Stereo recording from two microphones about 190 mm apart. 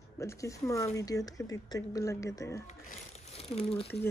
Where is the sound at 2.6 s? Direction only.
35° left (ahead or behind).